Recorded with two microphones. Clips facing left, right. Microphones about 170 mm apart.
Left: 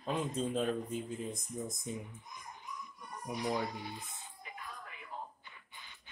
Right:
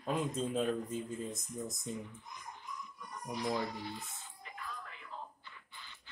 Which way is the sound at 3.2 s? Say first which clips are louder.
Even; 15° left (ahead or behind).